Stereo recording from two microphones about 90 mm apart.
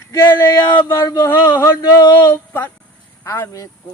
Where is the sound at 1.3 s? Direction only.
30° left (ahead or behind).